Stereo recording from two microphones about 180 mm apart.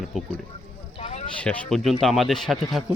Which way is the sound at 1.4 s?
5° left (ahead or behind).